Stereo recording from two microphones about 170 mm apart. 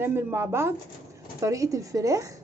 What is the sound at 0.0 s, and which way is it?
A woman's voice, 15° right (ahead or behind).